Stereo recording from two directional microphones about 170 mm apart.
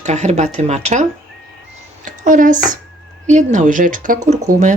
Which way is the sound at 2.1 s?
50° right (ahead or behind).